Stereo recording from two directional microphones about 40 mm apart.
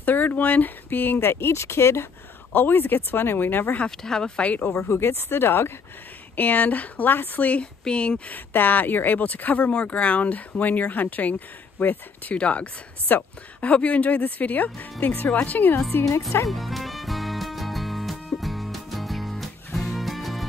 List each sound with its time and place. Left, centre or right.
0.0 s speech: left
1.2 s speech: left
2.5 s speech: left
4.0 s speech: centre
4.4 s speech: left
4.8 s speech: left
6.3 s speech: left
7.8 s speech: left
8.3 s speech: left
9.7 s speech: left
12.4 s speech: left
15.9 s speech: left
16.4 s music: centre